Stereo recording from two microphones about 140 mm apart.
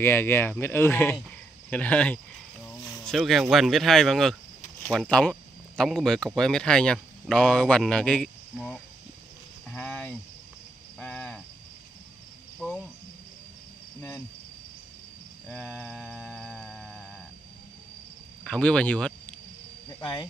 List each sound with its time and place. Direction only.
0.0 s speech: 15° left (ahead or behind)
11.0 s cricket: 10° left (ahead or behind)
12.5 s cricket: 5° left (ahead or behind)
15.4 s cricket: 10° left (ahead or behind)
16.0 s music: centre (ahead or behind)
18.4 s speech: 5° left (ahead or behind)
20.0 s speech: 30° left (ahead or behind)